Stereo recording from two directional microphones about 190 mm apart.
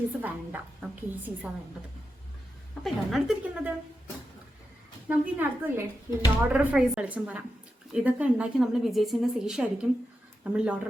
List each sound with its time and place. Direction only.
0.2 s a woman's voice: 10° right (ahead or behind)
2.8 s a woman's voice: centre (ahead or behind)
5.0 s a woman's voice: 10° right (ahead or behind)